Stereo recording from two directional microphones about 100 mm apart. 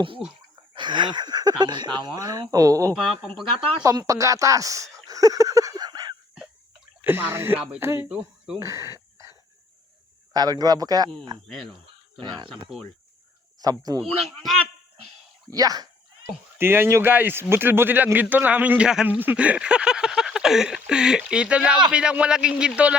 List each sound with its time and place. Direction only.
0.2 s a man's voice: 5° right (ahead or behind)
0.7 s speech: 50° right (ahead or behind); by 2.9 s 35° right (ahead or behind)
2.9 s a man's voice: 5° right (ahead or behind)
3.8 s speech: 35° right (ahead or behind)
5.0 s a sound: 35° right (ahead or behind)
7.0 s a man's voice: 20° right (ahead or behind)
10.3 s speech: 40° right (ahead or behind)
11.4 s a man's voice: 5° left (ahead or behind)
12.2 s speech: 45° right (ahead or behind)
13.6 s speech: 40° right (ahead or behind)
14.2 s a man's voice: centre (ahead or behind)
15.4 s speech: 40° right (ahead or behind)
16.6 s a man's voice: 25° right (ahead or behind)